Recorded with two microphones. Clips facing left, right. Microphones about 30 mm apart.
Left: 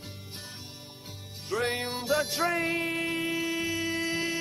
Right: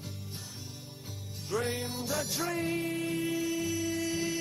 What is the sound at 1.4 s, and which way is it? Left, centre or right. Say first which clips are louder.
Music: left 3 dB; left.